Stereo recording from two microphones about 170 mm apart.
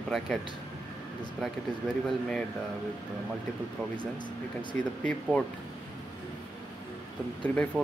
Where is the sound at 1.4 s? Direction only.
5° left (ahead or behind).